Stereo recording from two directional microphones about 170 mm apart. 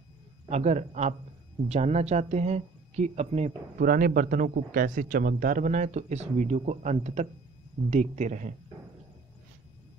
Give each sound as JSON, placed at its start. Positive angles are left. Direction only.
{"t": 0.5, "sound": "speech", "side_deg": -40}